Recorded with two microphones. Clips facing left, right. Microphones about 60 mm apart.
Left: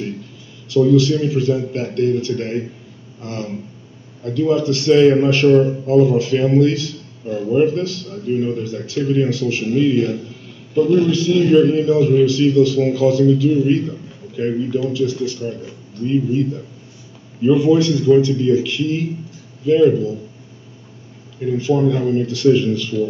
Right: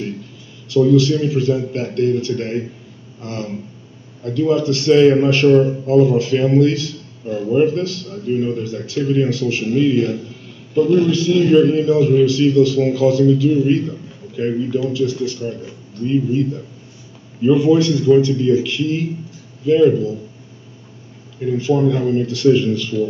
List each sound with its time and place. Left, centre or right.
0.7 s a man's voice: right
17.4 s a man's voice: right
21.5 s a man's voice: right